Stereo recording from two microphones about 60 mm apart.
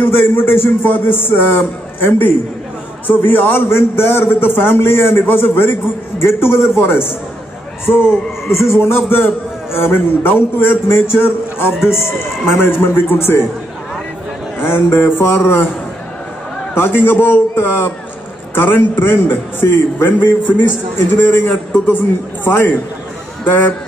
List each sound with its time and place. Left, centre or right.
0.0 s a man's voice: left
3.6 s a man's voice: left
14.6 s a man's voice: left
16.7 s a man's voice: left